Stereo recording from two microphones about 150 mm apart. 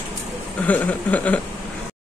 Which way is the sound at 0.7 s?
10° left (ahead or behind).